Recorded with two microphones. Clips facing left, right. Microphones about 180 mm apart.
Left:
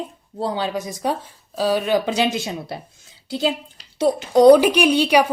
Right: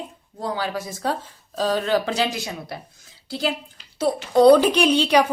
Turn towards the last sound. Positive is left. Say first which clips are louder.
# left 1 dB
turn(degrees=10)  # may be behind; listen again after turning